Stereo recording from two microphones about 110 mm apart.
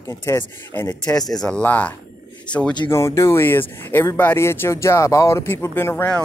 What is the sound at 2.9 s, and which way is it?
Speech, 25° left (ahead or behind).